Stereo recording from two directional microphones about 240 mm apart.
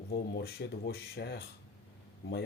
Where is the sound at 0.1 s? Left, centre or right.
Left.